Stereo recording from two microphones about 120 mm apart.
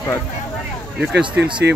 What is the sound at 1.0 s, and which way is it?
Speech, 10° right (ahead or behind).